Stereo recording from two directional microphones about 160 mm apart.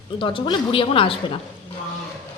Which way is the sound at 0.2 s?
30° left (ahead or behind).